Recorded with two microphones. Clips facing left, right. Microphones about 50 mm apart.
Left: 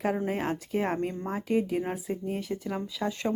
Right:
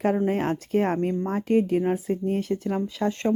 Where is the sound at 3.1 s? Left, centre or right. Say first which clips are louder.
Right 5 dB; right.